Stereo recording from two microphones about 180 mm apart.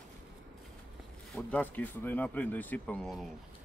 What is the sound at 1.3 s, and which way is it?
A man's voice, 10° left (ahead or behind).